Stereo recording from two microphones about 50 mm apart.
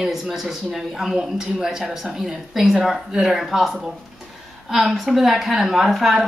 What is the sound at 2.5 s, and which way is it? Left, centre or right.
Speech, centre.